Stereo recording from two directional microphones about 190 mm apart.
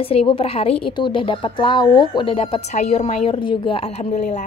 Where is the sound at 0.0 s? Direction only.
30° left (ahead or behind).